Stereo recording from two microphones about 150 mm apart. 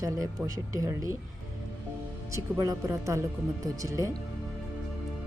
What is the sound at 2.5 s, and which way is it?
Speech, 20° right (ahead or behind).